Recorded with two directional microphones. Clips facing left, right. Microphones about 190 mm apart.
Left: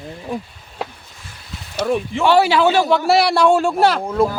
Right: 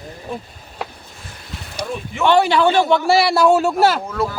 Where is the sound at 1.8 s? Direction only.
75° left (ahead or behind).